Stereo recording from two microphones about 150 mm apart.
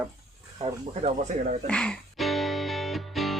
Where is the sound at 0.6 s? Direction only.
50° right (ahead or behind).